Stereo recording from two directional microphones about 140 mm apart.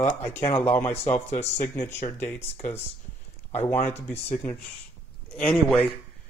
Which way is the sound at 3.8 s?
50° left (ahead or behind).